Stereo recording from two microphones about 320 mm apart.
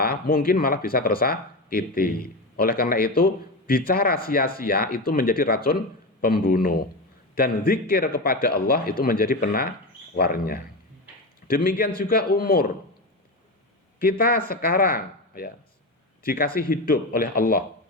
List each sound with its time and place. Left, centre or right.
0.0 s speech: left
14.0 s a man's voice: left